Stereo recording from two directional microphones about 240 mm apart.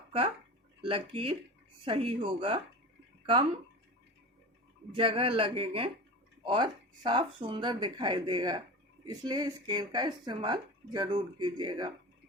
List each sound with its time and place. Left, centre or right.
0.8 s speech: right
4.9 s speech: right